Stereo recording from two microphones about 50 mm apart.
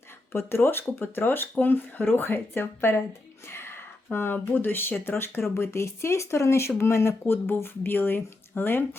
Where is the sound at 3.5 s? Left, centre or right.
Left.